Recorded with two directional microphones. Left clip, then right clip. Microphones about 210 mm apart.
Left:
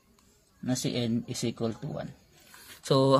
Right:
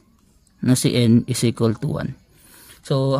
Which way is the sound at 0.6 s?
35° right (ahead or behind).